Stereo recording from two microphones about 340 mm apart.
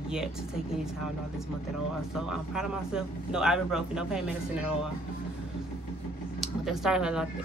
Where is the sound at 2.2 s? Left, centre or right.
Centre.